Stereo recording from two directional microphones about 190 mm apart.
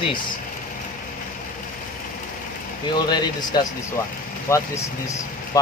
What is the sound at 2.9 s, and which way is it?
Speech, 20° left (ahead or behind).